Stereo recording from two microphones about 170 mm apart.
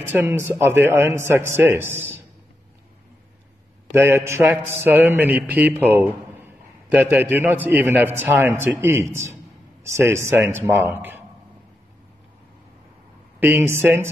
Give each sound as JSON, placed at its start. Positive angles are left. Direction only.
{"t": 0.1, "sound": "a man's voice", "side_deg": -15}
{"t": 3.9, "sound": "a man's voice", "side_deg": -15}
{"t": 13.4, "sound": "a man's voice", "side_deg": -10}